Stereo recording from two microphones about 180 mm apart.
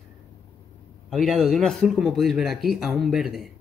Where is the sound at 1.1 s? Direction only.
Centre (ahead or behind).